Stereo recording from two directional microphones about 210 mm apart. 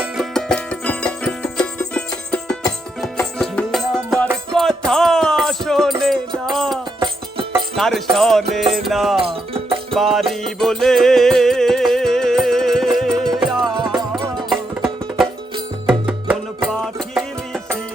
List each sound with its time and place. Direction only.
0.0 s music: centre (ahead or behind)
7.8 s music: centre (ahead or behind)
9.2 s music: 25° right (ahead or behind)
9.9 s music: centre (ahead or behind)